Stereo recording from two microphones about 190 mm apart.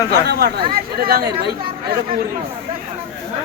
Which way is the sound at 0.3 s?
60° right (ahead or behind).